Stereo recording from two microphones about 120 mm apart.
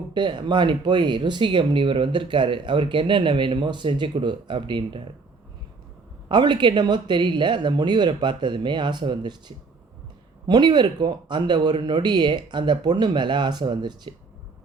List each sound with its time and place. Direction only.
0.1 s speech: 40° right (ahead or behind)
6.2 s speech: 40° right (ahead or behind)
10.4 s speech: 35° right (ahead or behind)